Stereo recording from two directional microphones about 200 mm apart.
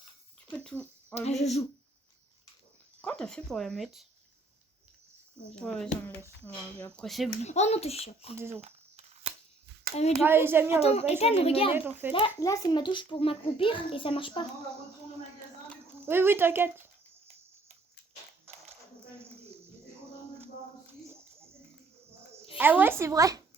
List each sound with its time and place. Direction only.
0.5 s a sound: 5° left (ahead or behind)
1.1 s a child's voice: 35° left (ahead or behind)
3.0 s speech: 5° left (ahead or behind)
5.5 s speech: 5° left (ahead or behind)
7.4 s a child's voice: 35° left (ahead or behind)
8.4 s speech: 10° right (ahead or behind)
8.6 s a sound: 30° right (ahead or behind)
10.2 s speech: 10° right (ahead or behind)
10.8 s a child's voice: 30° left (ahead or behind)
11.7 s speech: 10° right (ahead or behind)
12.4 s a child's voice: 20° left (ahead or behind)
16.0 s speech: 10° right (ahead or behind)
22.5 s speech: 10° right (ahead or behind)